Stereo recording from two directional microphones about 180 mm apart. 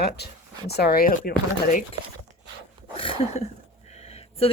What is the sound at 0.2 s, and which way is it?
Speech, 65° left (ahead or behind).